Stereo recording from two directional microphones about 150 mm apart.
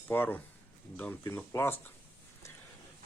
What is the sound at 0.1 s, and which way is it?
Speech, 15° left (ahead or behind).